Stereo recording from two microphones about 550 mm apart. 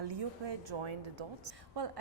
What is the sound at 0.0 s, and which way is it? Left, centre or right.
A woman's voice, right.